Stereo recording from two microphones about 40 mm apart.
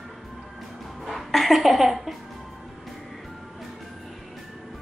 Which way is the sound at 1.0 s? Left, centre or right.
Centre.